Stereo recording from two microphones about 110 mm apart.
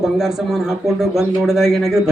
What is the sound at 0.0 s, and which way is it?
A man's voice, 5° right (ahead or behind).